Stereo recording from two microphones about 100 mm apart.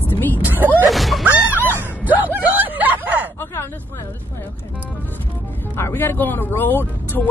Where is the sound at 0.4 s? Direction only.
20° right (ahead or behind).